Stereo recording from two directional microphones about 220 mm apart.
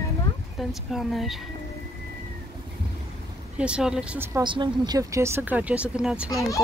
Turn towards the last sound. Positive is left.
turn(degrees=15)  # may be behind; listen again after turning